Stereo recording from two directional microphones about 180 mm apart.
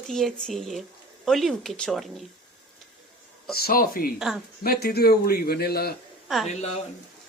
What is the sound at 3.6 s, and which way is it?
A man's voice, 55° left (ahead or behind).